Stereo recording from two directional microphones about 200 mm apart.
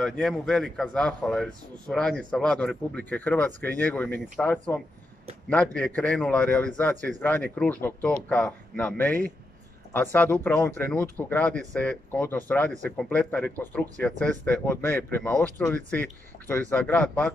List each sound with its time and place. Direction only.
0.0 s speech: centre (ahead or behind)